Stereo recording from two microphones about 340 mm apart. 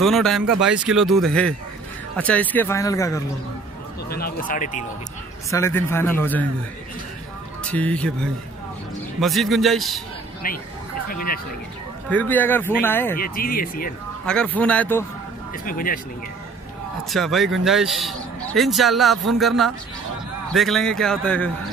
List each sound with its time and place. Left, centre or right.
0.0 s speech: centre
4.1 s speech: left
5.5 s speech: centre
7.7 s speech: centre
10.4 s speech: left
12.1 s speech: centre
13.2 s speech: left
14.2 s speech: centre
15.6 s speech: left
17.1 s speech: centre